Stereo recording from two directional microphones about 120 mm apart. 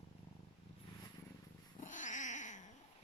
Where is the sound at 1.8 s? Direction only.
90° left.